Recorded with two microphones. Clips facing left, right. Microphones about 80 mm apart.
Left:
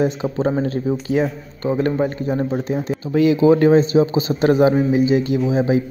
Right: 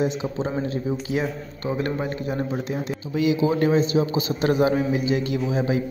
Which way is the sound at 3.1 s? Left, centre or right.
Left.